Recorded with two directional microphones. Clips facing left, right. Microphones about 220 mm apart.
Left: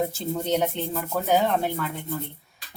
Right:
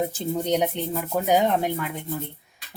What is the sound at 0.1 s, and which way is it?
Speech, 15° right (ahead or behind).